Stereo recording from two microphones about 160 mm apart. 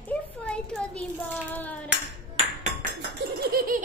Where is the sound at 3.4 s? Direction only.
70° right (ahead or behind).